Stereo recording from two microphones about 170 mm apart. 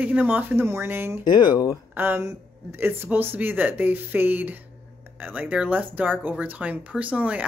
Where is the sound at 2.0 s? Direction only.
15° right (ahead or behind).